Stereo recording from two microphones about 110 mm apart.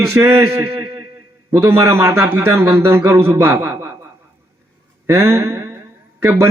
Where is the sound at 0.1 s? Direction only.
25° right (ahead or behind).